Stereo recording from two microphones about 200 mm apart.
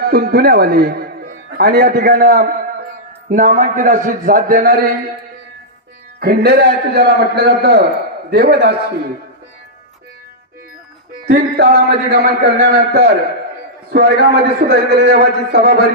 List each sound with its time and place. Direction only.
0.0 s a man's voice: 50° right (ahead or behind)
6.1 s a man's voice: 50° right (ahead or behind)
11.3 s a man's voice: 50° right (ahead or behind)